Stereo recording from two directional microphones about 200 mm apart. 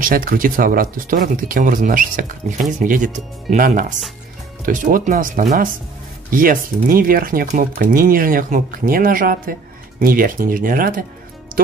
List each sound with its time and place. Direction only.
0.0 s speech: 45° right (ahead or behind)